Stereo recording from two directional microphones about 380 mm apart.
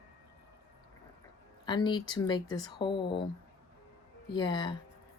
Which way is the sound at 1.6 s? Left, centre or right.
Centre.